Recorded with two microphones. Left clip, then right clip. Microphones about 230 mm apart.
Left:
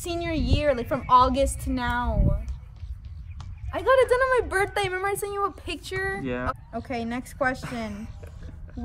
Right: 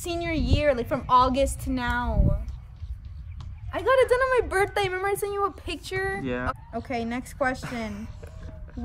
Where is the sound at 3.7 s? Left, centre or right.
Centre.